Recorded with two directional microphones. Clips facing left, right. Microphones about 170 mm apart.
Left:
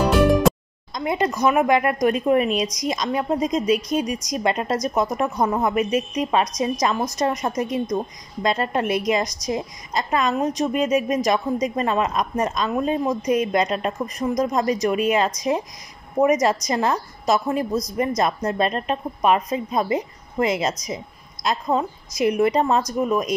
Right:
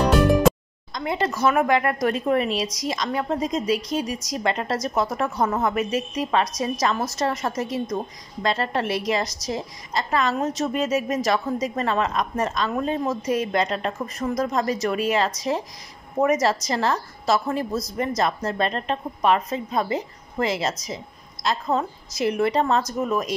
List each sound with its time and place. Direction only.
0.0 s music: centre (ahead or behind)
0.9 s a woman's voice: 20° left (ahead or behind)